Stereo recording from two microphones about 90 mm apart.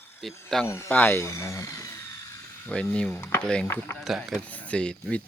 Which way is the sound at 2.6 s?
15° left (ahead or behind).